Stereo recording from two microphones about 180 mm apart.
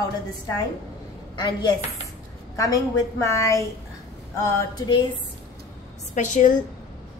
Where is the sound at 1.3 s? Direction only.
25° left (ahead or behind).